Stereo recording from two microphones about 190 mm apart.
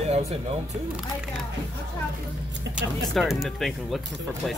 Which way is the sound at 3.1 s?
Centre (ahead or behind).